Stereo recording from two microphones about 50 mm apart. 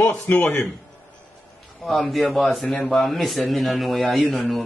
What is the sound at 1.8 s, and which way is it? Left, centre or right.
A man's voice, centre.